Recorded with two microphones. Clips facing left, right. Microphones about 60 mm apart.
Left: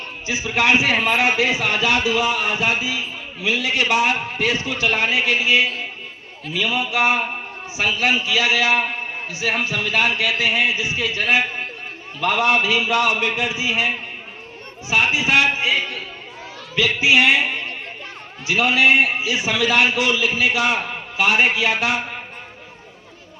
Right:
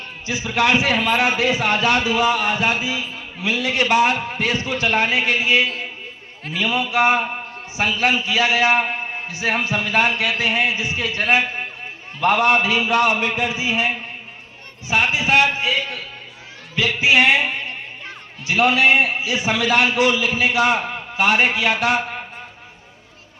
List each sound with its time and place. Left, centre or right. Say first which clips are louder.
1.1 s a man's voice: even; right
16.7 s a man's voice: even; right
18.4 s a man's voice: right 1 dB; right